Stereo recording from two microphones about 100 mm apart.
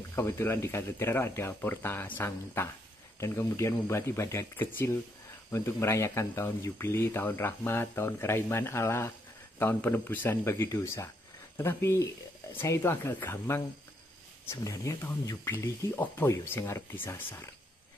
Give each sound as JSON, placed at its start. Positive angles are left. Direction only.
{"t": 0.1, "sound": "speech", "side_deg": 25}